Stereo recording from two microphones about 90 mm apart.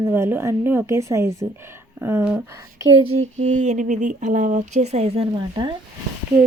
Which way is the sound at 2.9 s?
80° right.